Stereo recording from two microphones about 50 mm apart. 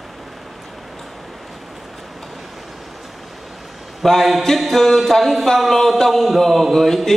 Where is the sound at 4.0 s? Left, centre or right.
Centre.